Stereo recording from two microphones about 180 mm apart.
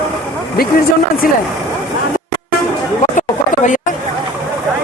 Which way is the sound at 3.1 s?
45° left (ahead or behind).